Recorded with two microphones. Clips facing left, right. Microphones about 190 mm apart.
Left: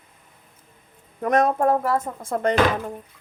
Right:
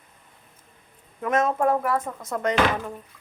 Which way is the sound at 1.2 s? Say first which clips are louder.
Left 3 dB; 40° left (ahead or behind).